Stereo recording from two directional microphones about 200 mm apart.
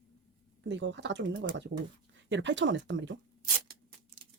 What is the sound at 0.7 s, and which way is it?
Speech, 65° right (ahead or behind).